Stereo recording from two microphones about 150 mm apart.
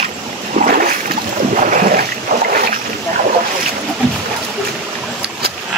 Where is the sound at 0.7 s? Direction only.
70° right (ahead or behind).